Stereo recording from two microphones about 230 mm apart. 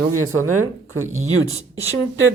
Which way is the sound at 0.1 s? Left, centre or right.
Right.